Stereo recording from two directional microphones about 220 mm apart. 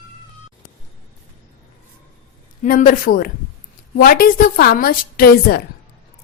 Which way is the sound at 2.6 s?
35° left (ahead or behind).